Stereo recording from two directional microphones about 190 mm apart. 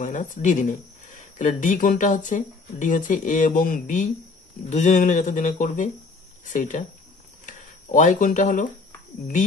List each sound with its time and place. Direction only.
0.0 s speech: 40° left (ahead or behind)